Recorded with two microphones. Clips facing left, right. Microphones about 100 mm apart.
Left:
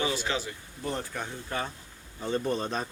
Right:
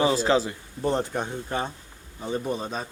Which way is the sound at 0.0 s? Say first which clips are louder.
Right 9 dB; 35° right (ahead or behind).